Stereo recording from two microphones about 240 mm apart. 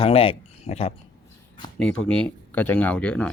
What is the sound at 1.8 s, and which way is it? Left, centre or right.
Speech, centre.